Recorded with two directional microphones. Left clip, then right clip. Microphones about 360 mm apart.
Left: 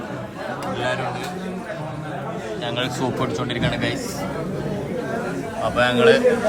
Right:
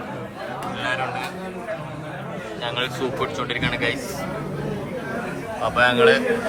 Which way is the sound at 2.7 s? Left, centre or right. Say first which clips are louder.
Even; centre.